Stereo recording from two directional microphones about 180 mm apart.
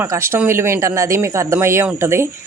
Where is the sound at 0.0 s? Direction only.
15° right (ahead or behind).